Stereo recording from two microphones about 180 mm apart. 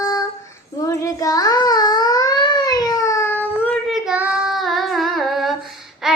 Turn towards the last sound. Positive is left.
turn(degrees=0)  # may be behind; listen again after turning